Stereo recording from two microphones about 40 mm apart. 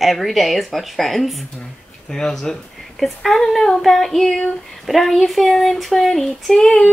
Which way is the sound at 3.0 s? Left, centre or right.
Centre.